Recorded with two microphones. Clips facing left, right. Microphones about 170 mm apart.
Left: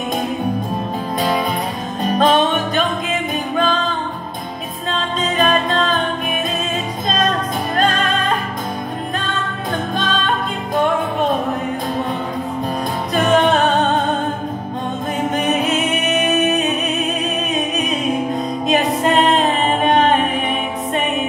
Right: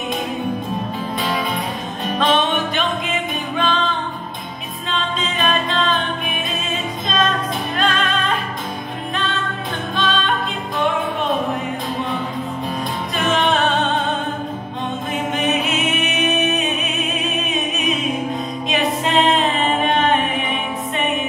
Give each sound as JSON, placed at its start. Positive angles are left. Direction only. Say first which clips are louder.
{"t": 2.0, "sound": "music", "louder": "left 4 dB", "side_deg": 40}
{"t": 4.9, "sound": "music", "louder": "left 4 dB", "side_deg": 45}
{"t": 7.7, "sound": "music", "louder": "left 3 dB", "side_deg": 45}
{"t": 9.9, "sound": "music", "louder": "right 2 dB", "side_deg": 45}
{"t": 13.1, "sound": "music", "louder": "left 5 dB", "side_deg": 45}
{"t": 16.1, "sound": "music", "louder": "left 6 dB", "side_deg": 45}
{"t": 18.7, "sound": "music", "louder": "left 4 dB", "side_deg": 45}